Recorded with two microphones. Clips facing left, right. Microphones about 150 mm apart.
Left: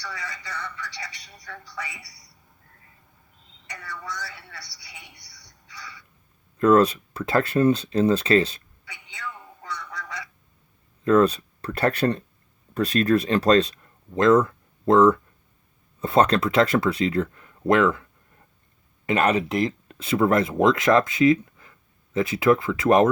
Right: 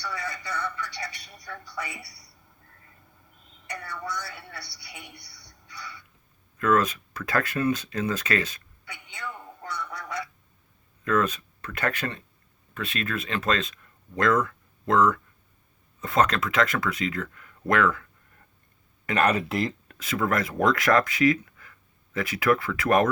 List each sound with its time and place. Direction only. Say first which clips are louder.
0.0 s a woman's voice: right 2 dB; 55° right (ahead or behind)
3.7 s a woman's voice: right 2 dB; 60° right (ahead or behind)
6.6 s speech: left 6 dB; 30° left (ahead or behind)
8.8 s a sound: even; 55° right (ahead or behind)
9.7 s goose: right 2 dB; 55° right (ahead or behind)
11.0 s speech: left 7 dB; 30° left (ahead or behind)
19.0 s speech: left 2 dB; 25° left (ahead or behind)